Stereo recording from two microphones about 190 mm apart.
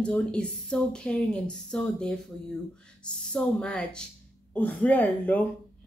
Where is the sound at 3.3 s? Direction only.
5° left (ahead or behind).